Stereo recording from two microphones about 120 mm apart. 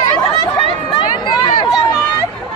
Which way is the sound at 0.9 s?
40° left (ahead or behind).